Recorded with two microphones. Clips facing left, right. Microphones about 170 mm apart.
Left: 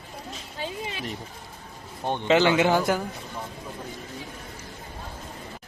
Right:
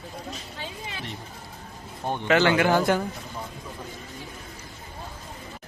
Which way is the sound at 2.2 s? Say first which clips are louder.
Left 1 dB; 15° left (ahead or behind).